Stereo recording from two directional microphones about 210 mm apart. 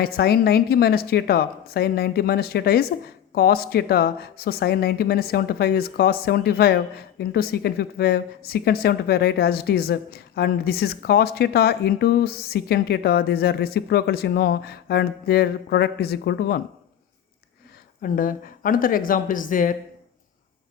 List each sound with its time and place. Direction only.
0.0 s speech: 45° left (ahead or behind)
18.0 s speech: 40° left (ahead or behind)